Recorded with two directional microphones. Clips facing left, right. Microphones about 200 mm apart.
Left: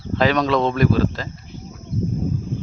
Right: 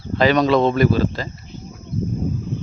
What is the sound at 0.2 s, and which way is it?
A man's voice, centre (ahead or behind).